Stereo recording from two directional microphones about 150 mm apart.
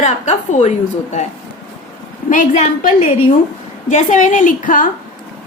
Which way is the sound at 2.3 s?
55° left (ahead or behind).